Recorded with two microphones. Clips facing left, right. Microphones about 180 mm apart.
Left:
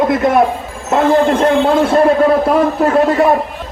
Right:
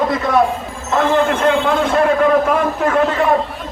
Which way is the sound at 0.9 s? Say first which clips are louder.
Left 4 dB; 35° left (ahead or behind).